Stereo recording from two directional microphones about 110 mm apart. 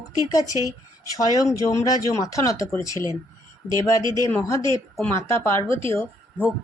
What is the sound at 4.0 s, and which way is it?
Speech, 40° right (ahead or behind).